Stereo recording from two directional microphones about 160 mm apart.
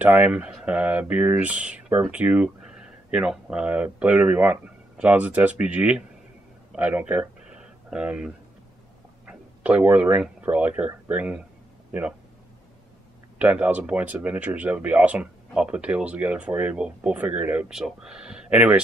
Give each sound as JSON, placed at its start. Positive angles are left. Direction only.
{"t": 0.0, "sound": "speech", "side_deg": -10}
{"t": 6.7, "sound": "a sound", "side_deg": -10}
{"t": 9.2, "sound": "speech", "side_deg": -10}
{"t": 13.4, "sound": "speech", "side_deg": -10}